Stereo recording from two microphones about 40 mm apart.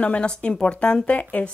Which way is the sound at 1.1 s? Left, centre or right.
Left.